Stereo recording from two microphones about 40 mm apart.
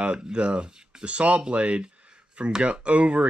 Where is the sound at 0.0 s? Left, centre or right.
Right.